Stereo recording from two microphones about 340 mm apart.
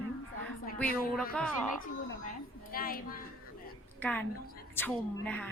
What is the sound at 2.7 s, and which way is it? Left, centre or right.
Speech, left.